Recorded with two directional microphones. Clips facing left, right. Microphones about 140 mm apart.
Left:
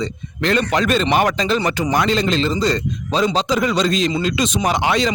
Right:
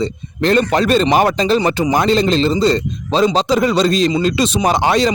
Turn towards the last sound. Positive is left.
turn(degrees=-35)  # may be behind; listen again after turning